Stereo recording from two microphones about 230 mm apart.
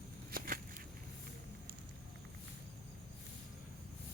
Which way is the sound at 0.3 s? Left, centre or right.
Right.